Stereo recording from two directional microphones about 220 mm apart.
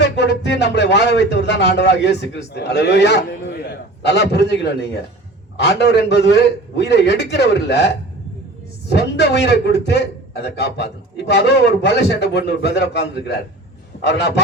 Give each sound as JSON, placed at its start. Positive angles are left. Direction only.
{"t": 0.0, "sound": "a man's voice", "side_deg": 50}